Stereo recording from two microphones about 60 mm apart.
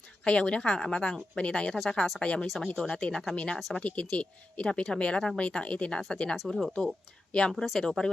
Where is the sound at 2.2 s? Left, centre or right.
Centre.